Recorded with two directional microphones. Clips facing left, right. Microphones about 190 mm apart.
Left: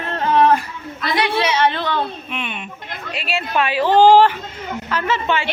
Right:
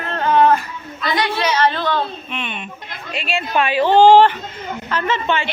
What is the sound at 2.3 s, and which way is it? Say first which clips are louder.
A woman's voice: even; 5° left (ahead or behind).